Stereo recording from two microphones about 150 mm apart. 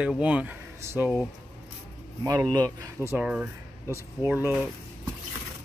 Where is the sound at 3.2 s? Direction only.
10° right (ahead or behind).